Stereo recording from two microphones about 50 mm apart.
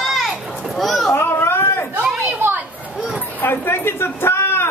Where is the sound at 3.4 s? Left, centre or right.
Left.